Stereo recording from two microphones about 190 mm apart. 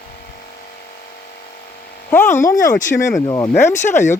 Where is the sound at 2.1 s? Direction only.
10° left (ahead or behind).